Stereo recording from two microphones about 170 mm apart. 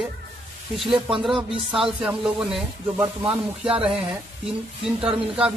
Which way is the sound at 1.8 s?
5° right (ahead or behind).